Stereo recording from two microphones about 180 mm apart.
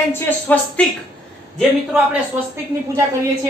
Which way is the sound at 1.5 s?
5° right (ahead or behind).